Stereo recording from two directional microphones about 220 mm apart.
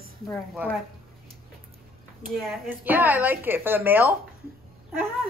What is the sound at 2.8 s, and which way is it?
A woman's voice, 10° right (ahead or behind).